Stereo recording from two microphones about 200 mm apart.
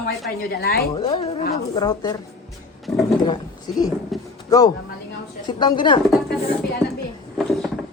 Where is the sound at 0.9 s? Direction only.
25° left (ahead or behind).